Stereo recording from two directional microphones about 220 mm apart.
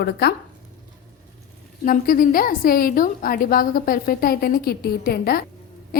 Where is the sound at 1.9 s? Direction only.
40° left (ahead or behind).